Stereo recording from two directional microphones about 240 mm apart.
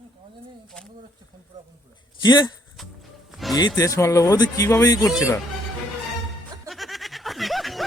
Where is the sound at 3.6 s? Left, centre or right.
Centre.